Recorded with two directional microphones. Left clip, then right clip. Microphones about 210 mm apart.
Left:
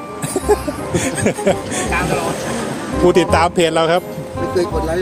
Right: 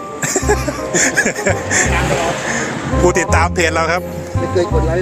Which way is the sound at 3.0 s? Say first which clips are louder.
Left 2 dB; 15° left (ahead or behind).